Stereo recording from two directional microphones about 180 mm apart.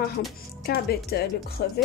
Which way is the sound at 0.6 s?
60° left (ahead or behind).